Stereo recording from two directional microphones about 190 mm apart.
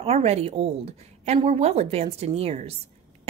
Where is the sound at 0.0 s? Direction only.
35° right (ahead or behind).